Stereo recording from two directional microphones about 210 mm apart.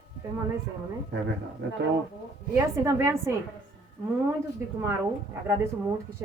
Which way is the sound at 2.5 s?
15° right (ahead or behind).